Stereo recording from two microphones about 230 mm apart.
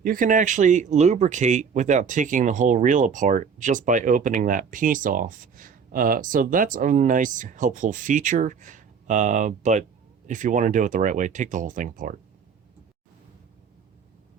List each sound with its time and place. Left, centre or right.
0.0 s speech: right